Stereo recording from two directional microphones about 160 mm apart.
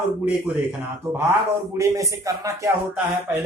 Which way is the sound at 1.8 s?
20° right (ahead or behind).